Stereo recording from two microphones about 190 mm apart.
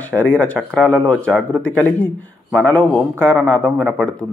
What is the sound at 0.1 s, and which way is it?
A man's voice, 5° left (ahead or behind).